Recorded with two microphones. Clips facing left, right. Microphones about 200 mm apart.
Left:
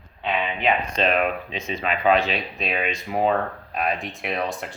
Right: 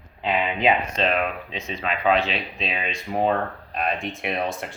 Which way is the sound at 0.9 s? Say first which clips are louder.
Left 2 dB; centre (ahead or behind).